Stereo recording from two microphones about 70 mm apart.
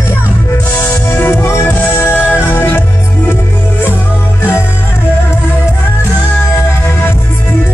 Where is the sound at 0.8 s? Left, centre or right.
Left.